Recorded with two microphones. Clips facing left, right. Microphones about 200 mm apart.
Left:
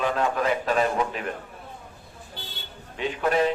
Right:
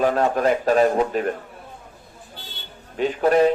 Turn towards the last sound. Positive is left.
turn(degrees=-45)  # may be behind; listen again after turning